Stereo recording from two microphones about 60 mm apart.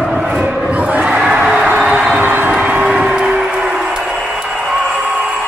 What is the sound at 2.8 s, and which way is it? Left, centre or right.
Train, centre.